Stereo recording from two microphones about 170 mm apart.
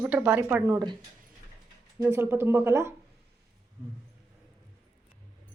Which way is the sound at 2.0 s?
15° right (ahead or behind).